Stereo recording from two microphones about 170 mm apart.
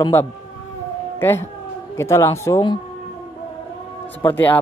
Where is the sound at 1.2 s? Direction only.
15° left (ahead or behind).